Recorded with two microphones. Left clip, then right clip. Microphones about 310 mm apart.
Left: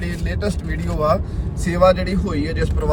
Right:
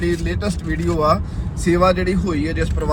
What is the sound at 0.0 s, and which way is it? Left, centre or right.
Speech, centre.